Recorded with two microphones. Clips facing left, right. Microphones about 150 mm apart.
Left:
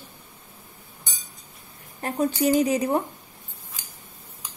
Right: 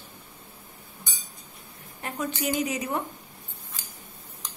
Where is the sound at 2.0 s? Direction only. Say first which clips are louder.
Left 7 dB; 35° left (ahead or behind).